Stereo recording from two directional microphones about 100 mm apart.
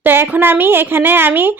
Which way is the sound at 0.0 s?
20° right (ahead or behind).